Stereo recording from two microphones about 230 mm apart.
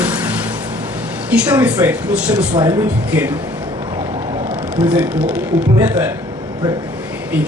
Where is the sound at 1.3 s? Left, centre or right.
Centre.